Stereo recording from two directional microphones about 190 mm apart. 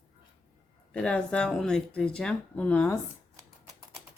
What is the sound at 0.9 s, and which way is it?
Speech, 5° left (ahead or behind).